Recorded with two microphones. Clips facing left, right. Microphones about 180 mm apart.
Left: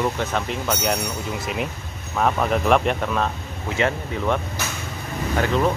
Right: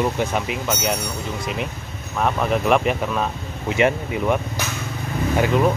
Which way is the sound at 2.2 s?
Centre (ahead or behind).